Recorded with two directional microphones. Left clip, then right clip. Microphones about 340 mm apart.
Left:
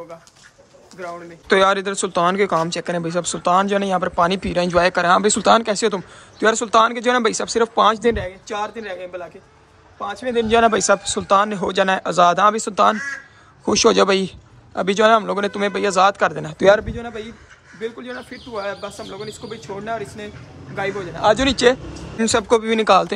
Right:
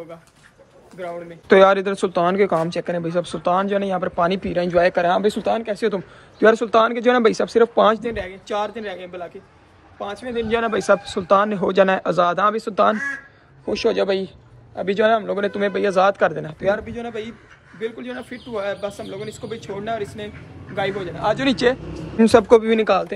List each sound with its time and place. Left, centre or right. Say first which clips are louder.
0.9 s speech: right 1 dB; centre
10.5 s a man's voice: left 3 dB; centre
16.5 s a man's voice: left 7 dB; left
16.9 s speech: right 1 dB; centre